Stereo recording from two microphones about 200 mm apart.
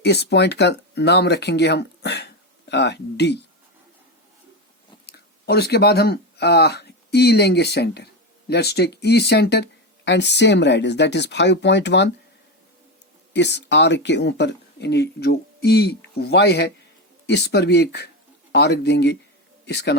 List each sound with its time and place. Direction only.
0.0 s speech: 55° left (ahead or behind)
5.0 s speech: 50° left (ahead or behind)
13.3 s speech: 60° left (ahead or behind)